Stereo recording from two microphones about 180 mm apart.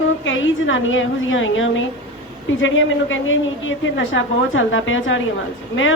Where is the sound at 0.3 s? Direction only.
90° left.